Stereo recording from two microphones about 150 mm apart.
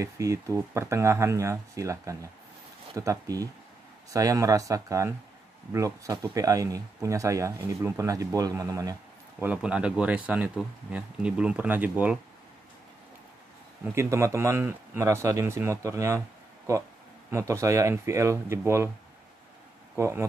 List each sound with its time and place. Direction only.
0.0 s speech: 20° right (ahead or behind)
9.4 s speech: 10° right (ahead or behind)
13.9 s speech: 20° right (ahead or behind)
17.3 s speech: 20° right (ahead or behind)
20.0 s speech: 20° right (ahead or behind)